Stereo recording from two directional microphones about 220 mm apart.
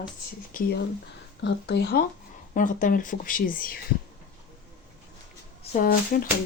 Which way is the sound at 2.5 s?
35° left (ahead or behind).